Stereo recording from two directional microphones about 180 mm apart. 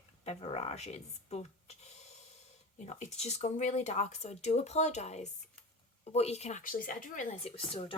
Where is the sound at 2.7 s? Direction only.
40° left (ahead or behind).